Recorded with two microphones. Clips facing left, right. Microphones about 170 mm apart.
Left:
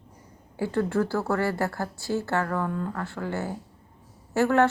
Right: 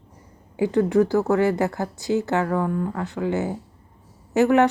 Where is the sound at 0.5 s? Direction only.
15° right (ahead or behind).